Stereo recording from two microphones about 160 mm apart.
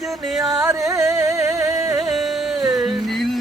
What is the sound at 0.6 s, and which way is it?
Music, 20° right (ahead or behind).